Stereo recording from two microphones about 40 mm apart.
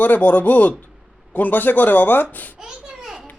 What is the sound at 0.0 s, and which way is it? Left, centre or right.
Speech, left.